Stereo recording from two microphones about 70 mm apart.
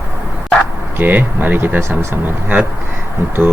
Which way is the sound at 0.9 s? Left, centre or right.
Right.